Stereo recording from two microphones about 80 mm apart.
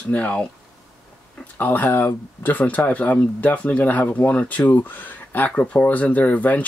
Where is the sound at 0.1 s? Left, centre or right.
Centre.